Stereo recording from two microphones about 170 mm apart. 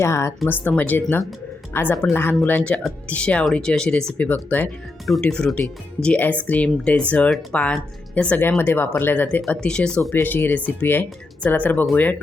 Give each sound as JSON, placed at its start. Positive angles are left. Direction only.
{"t": 0.0, "sound": "speech", "side_deg": 15}